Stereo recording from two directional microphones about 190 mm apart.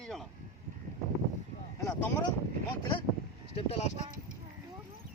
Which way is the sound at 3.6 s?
35° left (ahead or behind).